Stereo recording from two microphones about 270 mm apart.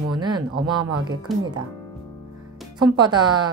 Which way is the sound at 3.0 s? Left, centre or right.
Centre.